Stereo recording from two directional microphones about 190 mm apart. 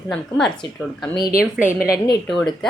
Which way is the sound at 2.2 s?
Centre (ahead or behind).